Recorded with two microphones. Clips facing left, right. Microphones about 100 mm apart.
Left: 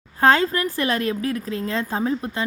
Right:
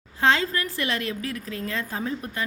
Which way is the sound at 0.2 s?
40° left (ahead or behind).